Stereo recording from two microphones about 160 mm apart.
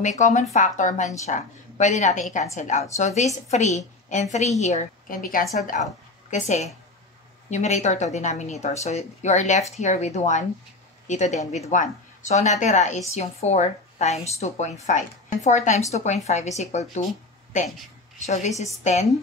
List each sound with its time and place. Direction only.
0.0 s speech: 50° left (ahead or behind)
6.3 s a woman's voice: 45° left (ahead or behind)